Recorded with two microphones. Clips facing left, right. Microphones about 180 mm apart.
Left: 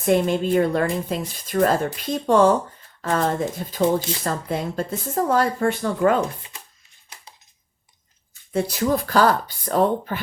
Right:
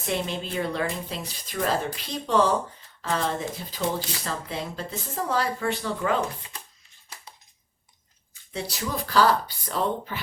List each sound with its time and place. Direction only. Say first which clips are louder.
0.0 s speech: left 10 dB; 50° left (ahead or behind)
8.5 s speech: left 10 dB; 50° left (ahead or behind)